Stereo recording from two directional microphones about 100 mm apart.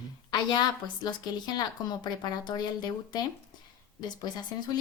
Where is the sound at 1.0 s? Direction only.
45° left (ahead or behind).